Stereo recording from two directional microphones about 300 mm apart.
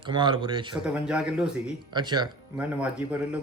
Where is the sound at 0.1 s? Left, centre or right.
Centre.